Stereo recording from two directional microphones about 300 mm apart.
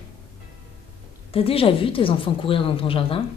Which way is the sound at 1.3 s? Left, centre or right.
Centre.